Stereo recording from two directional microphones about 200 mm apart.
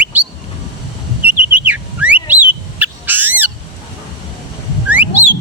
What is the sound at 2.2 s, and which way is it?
Bird, 10° right (ahead or behind).